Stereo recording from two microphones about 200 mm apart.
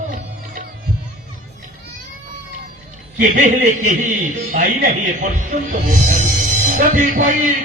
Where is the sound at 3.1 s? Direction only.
40° right (ahead or behind).